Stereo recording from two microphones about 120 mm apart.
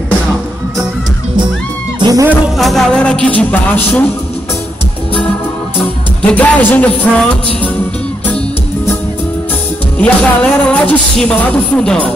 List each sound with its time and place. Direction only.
2.0 s music: 35° right (ahead or behind)
2.2 s speech: 5° right (ahead or behind); by 4.1 s 15° left (ahead or behind)
6.2 s speech: 10° left (ahead or behind)
9.9 s speech: 10° left (ahead or behind)